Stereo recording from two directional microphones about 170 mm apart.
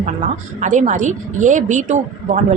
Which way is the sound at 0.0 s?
45° right (ahead or behind).